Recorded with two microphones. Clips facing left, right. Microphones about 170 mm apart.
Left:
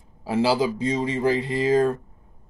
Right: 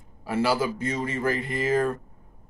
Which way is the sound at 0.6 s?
15° left (ahead or behind).